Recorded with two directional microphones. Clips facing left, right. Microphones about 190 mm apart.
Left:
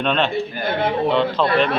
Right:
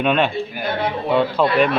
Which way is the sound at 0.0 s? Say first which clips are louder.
Right 2 dB; 10° right (ahead or behind).